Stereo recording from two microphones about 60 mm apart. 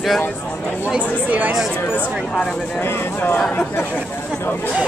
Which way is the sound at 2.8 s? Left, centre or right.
Left.